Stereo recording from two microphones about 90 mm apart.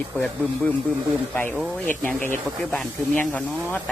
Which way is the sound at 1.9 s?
15° left (ahead or behind).